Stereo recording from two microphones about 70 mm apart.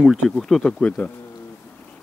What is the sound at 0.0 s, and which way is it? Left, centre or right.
Speech, centre.